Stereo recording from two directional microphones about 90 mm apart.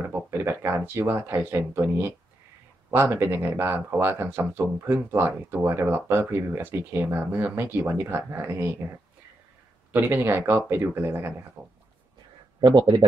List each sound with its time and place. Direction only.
0.0 s speech: 25° right (ahead or behind)
9.9 s speech: 25° right (ahead or behind)
12.5 s speech: 60° right (ahead or behind)